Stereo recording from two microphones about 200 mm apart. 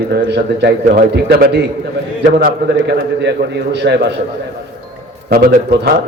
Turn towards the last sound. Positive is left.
turn(degrees=-50)  # may be behind; listen again after turning